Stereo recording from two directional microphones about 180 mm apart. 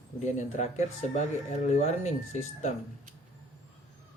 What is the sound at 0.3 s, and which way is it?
Speech, 40° left (ahead or behind).